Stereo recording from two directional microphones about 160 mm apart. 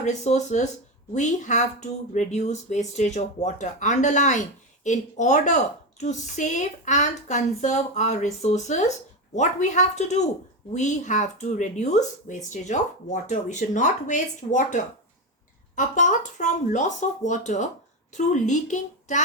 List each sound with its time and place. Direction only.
0.0 s speech: 50° left (ahead or behind)